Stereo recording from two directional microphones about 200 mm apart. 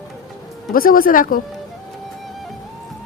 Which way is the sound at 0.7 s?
45° left (ahead or behind).